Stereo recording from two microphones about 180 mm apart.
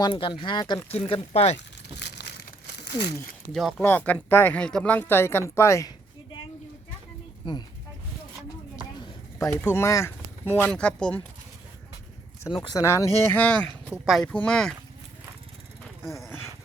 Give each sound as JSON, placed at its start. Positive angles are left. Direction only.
{"t": 0.0, "sound": "speech", "side_deg": 30}
{"t": 1.5, "sound": "crumpling", "side_deg": 70}
{"t": 3.5, "sound": "speech", "side_deg": 0}
{"t": 3.8, "sound": "speech", "side_deg": 10}
{"t": 7.4, "sound": "speech", "side_deg": 25}
{"t": 9.4, "sound": "speech", "side_deg": 15}
{"t": 12.6, "sound": "speech", "side_deg": 15}
{"t": 13.9, "sound": "speech", "side_deg": -5}